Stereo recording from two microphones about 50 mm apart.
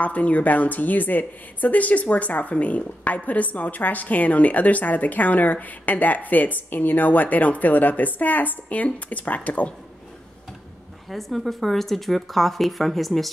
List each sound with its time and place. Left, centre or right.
0.0 s a woman's voice: left
11.1 s speech: centre